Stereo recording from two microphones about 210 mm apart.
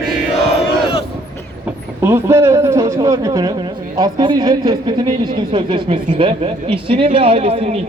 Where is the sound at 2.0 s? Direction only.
10° right (ahead or behind).